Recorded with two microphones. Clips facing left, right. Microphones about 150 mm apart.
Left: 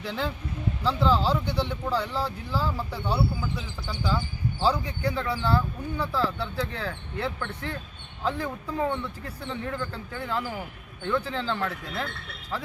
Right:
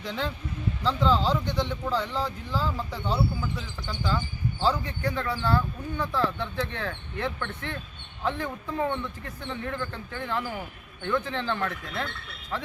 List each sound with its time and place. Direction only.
0.0 s speech: 5° left (ahead or behind)